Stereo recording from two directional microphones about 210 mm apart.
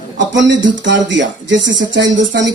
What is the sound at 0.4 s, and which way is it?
Speech, 60° right (ahead or behind).